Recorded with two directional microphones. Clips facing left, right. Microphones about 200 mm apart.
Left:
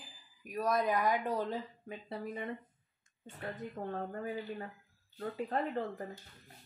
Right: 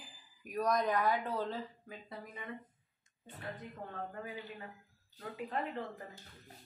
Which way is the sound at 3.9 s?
40° left (ahead or behind).